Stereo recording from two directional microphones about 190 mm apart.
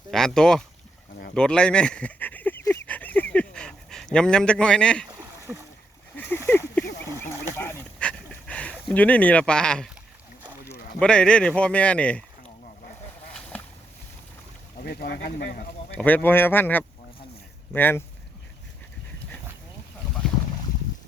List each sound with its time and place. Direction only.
0.1 s a man's voice: centre (ahead or behind)
1.3 s a sound: 5° left (ahead or behind)
5.0 s rowboat: 10° right (ahead or behind)
6.1 s a sound: 10° left (ahead or behind)
7.2 s dog: 10° left (ahead or behind)
11.0 s a man's voice: 5° left (ahead or behind)
14.8 s speech: 50° left (ahead or behind)
15.9 s speech: 10° left (ahead or behind)